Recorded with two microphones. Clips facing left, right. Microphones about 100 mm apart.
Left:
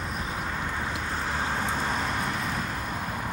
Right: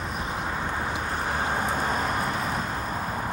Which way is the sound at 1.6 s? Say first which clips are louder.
Right 2 dB; 45° right (ahead or behind).